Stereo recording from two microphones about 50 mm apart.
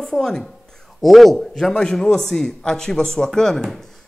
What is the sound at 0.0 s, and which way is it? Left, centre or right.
A woman's voice, centre.